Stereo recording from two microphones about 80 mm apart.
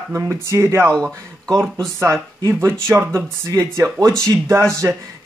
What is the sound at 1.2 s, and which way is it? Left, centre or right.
Speech, right.